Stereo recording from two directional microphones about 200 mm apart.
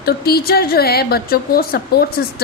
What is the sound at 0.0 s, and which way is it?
A woman's voice, 50° left (ahead or behind).